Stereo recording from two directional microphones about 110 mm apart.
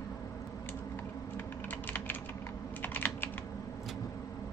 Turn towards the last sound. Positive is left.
turn(degrees=15)  # may be behind; listen again after turning